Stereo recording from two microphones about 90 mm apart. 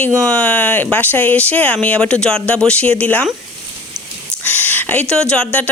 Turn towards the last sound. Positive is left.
turn(degrees=10)  # may be behind; listen again after turning